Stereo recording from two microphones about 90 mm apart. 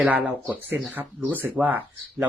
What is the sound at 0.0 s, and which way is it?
Speech, 20° right (ahead or behind).